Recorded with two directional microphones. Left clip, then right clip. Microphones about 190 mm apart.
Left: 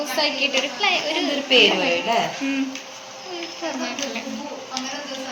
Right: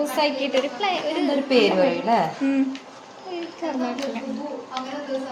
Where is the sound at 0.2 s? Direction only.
30° right (ahead or behind).